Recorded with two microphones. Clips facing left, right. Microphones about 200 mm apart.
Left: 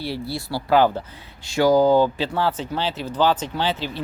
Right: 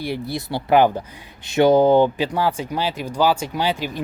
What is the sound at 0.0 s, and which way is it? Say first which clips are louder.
A man's voice: right 2 dB; 15° right (ahead or behind).